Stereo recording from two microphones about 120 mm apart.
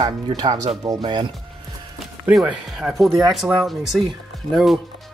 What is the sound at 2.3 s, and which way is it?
Speech, 5° right (ahead or behind).